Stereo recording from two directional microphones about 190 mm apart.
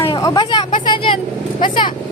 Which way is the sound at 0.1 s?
20° left (ahead or behind).